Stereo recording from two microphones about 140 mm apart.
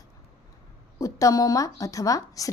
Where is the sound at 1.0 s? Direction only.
25° left (ahead or behind).